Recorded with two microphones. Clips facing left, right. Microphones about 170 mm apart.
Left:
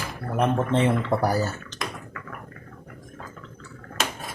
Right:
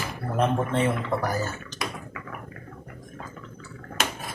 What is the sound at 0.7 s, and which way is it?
Speech, 30° left (ahead or behind).